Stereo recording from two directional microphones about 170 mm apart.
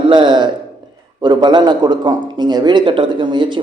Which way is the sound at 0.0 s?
30° right (ahead or behind).